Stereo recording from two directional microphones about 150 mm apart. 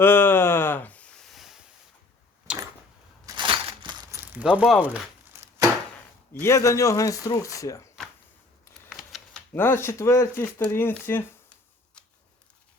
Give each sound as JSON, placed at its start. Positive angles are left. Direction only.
{"t": 0.0, "sound": "a sound", "side_deg": 15}
{"t": 3.2, "sound": "crushing", "side_deg": -30}
{"t": 4.1, "sound": "speech", "side_deg": -10}
{"t": 5.3, "sound": "chopping", "side_deg": -15}
{"t": 6.4, "sound": "speech", "side_deg": 20}
{"t": 8.9, "sound": "typewriter", "side_deg": 0}
{"t": 9.5, "sound": "speech", "side_deg": 15}
{"t": 12.0, "sound": "a sound", "side_deg": 5}